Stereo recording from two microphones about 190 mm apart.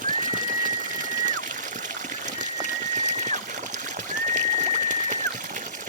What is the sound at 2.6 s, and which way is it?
Pigeon, 40° right (ahead or behind).